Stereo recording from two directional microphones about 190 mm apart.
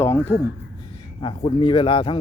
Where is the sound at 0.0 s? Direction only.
10° left (ahead or behind).